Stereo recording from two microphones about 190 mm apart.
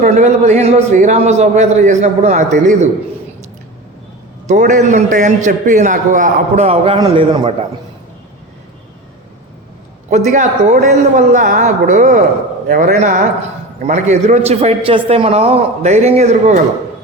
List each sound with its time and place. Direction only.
0.0 s a man's voice: 40° right (ahead or behind)
4.4 s a man's voice: 40° right (ahead or behind)
10.1 s a man's voice: 35° right (ahead or behind)